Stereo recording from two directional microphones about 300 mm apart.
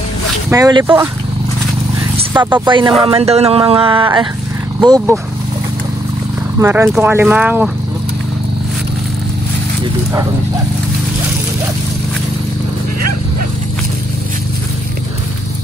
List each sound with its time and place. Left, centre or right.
0.5 s speech: centre
2.1 s speech: centre
6.6 s speech: centre